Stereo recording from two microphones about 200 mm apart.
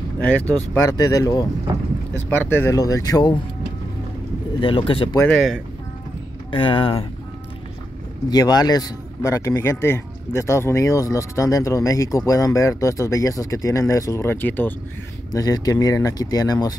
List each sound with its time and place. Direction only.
0.2 s speech: 10° left (ahead or behind)
2.5 s speech: 15° left (ahead or behind)
4.6 s speech: 25° left (ahead or behind)
5.2 s speech: 5° left (ahead or behind)
6.5 s speech: 25° left (ahead or behind)
8.3 s speech: 20° left (ahead or behind)